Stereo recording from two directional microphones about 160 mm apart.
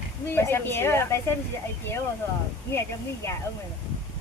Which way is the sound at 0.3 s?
15° left (ahead or behind).